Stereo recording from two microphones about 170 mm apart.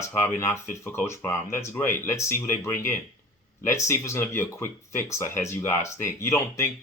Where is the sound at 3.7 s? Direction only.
15° left (ahead or behind).